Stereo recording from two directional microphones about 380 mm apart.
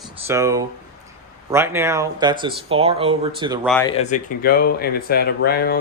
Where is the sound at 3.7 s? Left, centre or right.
Centre.